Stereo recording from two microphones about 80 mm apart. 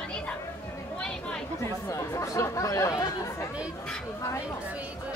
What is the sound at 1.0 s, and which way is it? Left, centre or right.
Chatter, centre.